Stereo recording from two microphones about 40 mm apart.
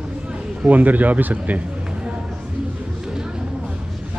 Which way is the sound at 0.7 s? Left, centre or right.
Right.